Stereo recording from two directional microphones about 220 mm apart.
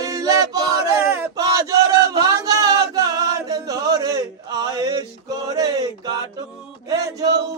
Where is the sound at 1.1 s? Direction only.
10° right (ahead or behind).